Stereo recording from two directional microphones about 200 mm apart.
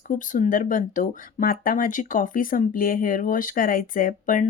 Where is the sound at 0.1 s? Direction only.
40° left (ahead or behind).